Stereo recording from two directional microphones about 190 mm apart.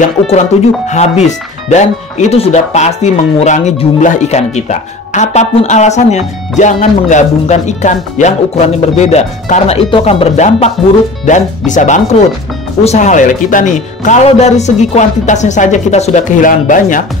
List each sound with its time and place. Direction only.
0.8 s speech: 35° left (ahead or behind)